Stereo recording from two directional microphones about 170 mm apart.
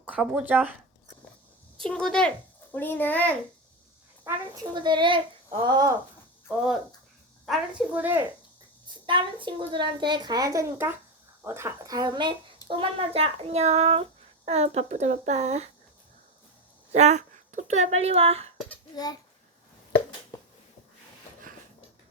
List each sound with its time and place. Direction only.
0.0 s speech: 5° right (ahead or behind)
1.8 s a child's voice: 5° left (ahead or behind)
4.5 s a child's voice: 25° right (ahead or behind)
7.4 s speech: 5° right (ahead or behind)
9.0 s a child's voice: 30° right (ahead or behind)
16.9 s speech: 40° right (ahead or behind)